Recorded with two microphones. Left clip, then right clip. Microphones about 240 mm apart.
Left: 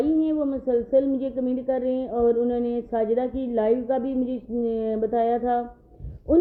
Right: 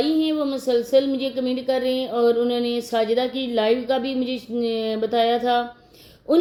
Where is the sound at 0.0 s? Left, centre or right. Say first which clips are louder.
Right 1 dB; centre.